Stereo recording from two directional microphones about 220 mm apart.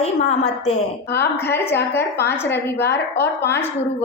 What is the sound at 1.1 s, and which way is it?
Speech, 50° left (ahead or behind).